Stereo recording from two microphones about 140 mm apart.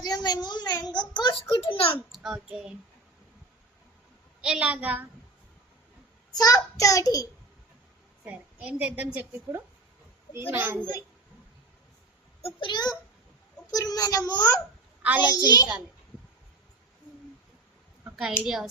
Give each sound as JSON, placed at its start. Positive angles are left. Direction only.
{"t": 0.0, "sound": "a sound", "side_deg": 30}
{"t": 0.4, "sound": "a child's voice", "side_deg": 30}
{"t": 2.1, "sound": "child singing", "side_deg": 0}
{"t": 2.5, "sound": "a woman's voice", "side_deg": -5}
{"t": 4.4, "sound": "a woman's voice", "side_deg": -5}
{"t": 6.3, "sound": "a child's voice", "side_deg": 25}
{"t": 8.6, "sound": "a woman's voice", "side_deg": -10}
{"t": 12.4, "sound": "a child's voice", "side_deg": 40}
{"t": 18.0, "sound": "a sound", "side_deg": -10}
{"t": 18.4, "sound": "speech", "side_deg": -5}